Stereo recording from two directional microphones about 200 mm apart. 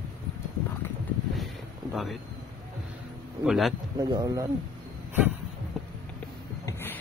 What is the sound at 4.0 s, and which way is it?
Speech, 20° right (ahead or behind).